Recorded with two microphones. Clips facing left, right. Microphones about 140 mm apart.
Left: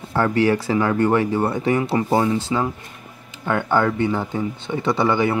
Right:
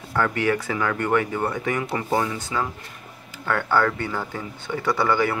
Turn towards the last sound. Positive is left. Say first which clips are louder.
# left 3 dB
turn(degrees=20)  # may be behind; listen again after turning